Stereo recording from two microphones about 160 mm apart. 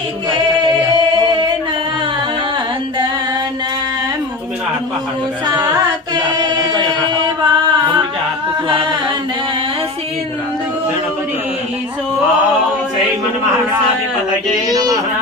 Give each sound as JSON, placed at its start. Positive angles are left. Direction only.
{"t": 0.3, "sound": "singing", "side_deg": -30}
{"t": 6.1, "sound": "chant", "side_deg": -25}
{"t": 14.7, "sound": "speech", "side_deg": -25}